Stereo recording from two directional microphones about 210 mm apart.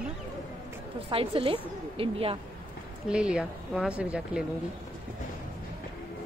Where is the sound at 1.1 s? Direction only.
25° right (ahead or behind).